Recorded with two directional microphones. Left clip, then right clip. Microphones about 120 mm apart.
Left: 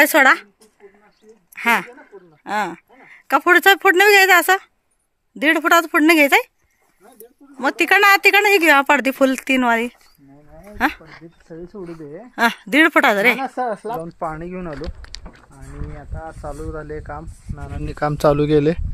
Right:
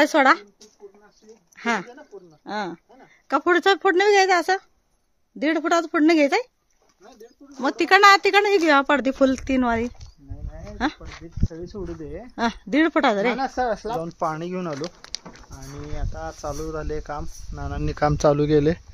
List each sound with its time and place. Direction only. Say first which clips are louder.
0.0 s speech: left 4 dB; 15° left (ahead or behind)
1.5 s speech: left 8 dB; 10° left (ahead or behind)
1.9 s speech: left 1 dB; 20° left (ahead or behind)
2.4 s speech: left 7 dB; 10° left (ahead or behind)
7.6 s speech: left 1 dB; centre (ahead or behind)
8.1 s speech: left 4 dB; 15° left (ahead or behind)
11.0 s speech: right 4 dB; 65° left (ahead or behind)
12.4 s speech: left 7 dB; centre (ahead or behind)
14.2 s speech: right 1 dB; 15° right (ahead or behind)
14.7 s speech: right 1 dB; centre (ahead or behind)
15.5 s speech: right 1 dB; 15° right (ahead or behind)
18.1 s speech: left 4 dB; 15° left (ahead or behind)